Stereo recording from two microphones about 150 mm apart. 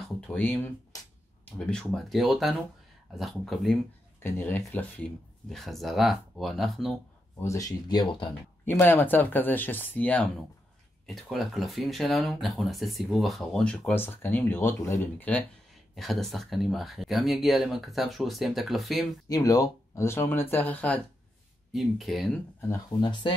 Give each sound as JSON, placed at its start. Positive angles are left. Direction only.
{"t": 0.3, "sound": "speech", "side_deg": 15}
{"t": 4.2, "sound": "speech", "side_deg": 15}
{"t": 7.3, "sound": "speech", "side_deg": 20}
{"t": 8.6, "sound": "speech", "side_deg": 15}
{"t": 19.2, "sound": "speech", "side_deg": 25}
{"t": 21.7, "sound": "speech", "side_deg": 0}
{"t": 22.7, "sound": "speech", "side_deg": 30}